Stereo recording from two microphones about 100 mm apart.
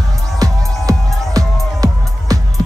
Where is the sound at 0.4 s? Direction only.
35° right (ahead or behind).